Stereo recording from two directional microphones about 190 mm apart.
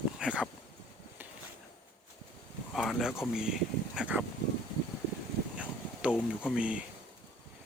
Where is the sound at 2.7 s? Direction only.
Centre (ahead or behind).